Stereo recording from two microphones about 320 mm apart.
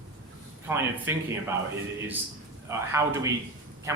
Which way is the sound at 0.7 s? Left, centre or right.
Centre.